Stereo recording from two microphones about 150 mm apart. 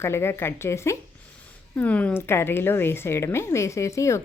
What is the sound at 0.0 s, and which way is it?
Speech, 15° left (ahead or behind).